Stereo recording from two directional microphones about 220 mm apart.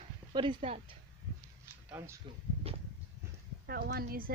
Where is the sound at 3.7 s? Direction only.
45° right (ahead or behind).